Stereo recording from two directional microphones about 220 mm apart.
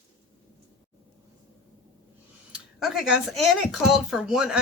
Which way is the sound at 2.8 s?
Centre (ahead or behind).